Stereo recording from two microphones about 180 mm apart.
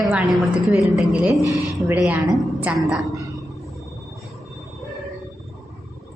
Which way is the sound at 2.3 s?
5° right (ahead or behind).